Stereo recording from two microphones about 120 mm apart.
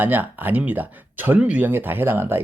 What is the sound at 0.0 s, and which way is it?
Speech, 15° right (ahead or behind).